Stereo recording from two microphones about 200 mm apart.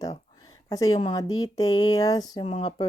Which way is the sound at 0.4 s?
15° left (ahead or behind).